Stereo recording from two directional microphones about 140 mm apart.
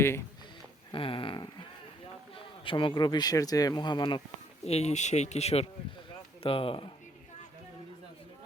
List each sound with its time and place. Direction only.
0.9 s speech: 40° left (ahead or behind)
2.6 s speech: 35° left (ahead or behind)
4.6 s speech: 50° left (ahead or behind)